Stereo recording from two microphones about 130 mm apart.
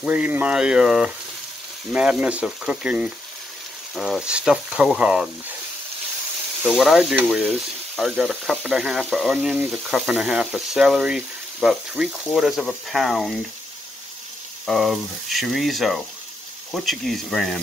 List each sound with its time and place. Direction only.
0.0 s speech: 10° right (ahead or behind)
6.6 s speech: 5° right (ahead or behind)
14.7 s speech: centre (ahead or behind)